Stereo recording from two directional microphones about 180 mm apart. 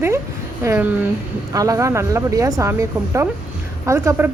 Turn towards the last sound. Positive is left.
turn(degrees=-15)  # may be behind; listen again after turning